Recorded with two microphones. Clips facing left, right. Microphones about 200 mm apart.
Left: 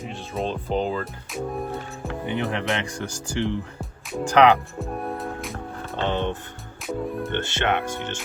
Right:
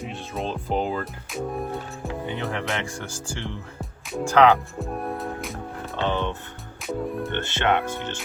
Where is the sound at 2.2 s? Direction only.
20° left (ahead or behind).